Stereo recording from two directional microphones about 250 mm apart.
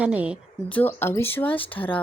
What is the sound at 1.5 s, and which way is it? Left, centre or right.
Speech, left.